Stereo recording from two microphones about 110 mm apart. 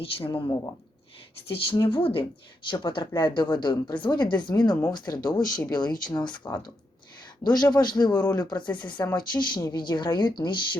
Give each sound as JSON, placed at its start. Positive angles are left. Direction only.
{"t": 0.3, "sound": "speech", "side_deg": 45}